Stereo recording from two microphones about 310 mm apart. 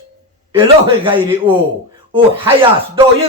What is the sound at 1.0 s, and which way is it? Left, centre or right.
Speech, centre.